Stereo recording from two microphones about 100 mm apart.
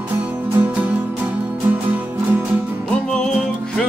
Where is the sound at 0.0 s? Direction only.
15° right (ahead or behind).